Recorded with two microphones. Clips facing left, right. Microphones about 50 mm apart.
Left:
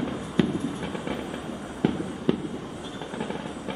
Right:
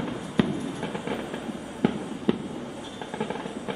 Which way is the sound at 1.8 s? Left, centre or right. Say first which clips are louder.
Even; centre.